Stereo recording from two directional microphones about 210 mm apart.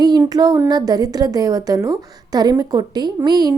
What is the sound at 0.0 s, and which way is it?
A woman's voice, 20° right (ahead or behind).